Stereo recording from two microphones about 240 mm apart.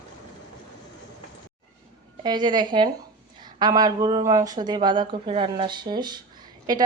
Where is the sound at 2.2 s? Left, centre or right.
Centre.